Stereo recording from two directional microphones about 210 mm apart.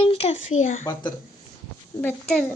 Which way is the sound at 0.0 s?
30° left (ahead or behind).